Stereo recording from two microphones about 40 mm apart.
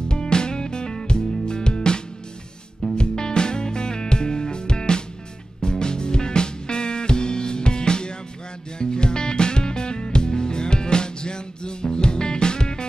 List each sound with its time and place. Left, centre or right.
0.1 s music: left
3.0 s music: centre